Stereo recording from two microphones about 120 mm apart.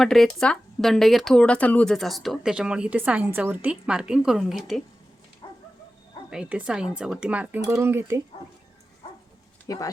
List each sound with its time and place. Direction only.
0.0 s speech: 5° left (ahead or behind)
6.3 s speech: 10° right (ahead or behind)
9.6 s speech: 30° left (ahead or behind)